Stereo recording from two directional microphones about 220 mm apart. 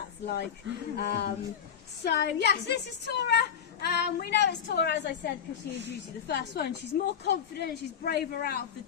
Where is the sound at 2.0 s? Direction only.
50° left (ahead or behind).